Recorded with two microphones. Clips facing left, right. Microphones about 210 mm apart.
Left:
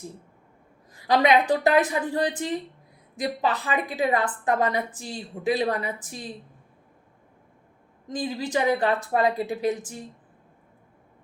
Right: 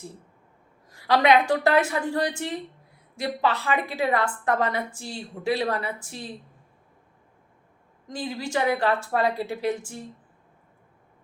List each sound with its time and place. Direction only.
0.9 s a woman's voice: 20° left (ahead or behind)
8.1 s a woman's voice: 20° left (ahead or behind)